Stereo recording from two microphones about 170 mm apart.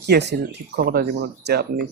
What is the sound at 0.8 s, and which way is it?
Speech, 70° right (ahead or behind).